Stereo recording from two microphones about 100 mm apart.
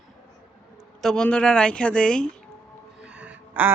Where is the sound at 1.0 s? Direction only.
5° left (ahead or behind).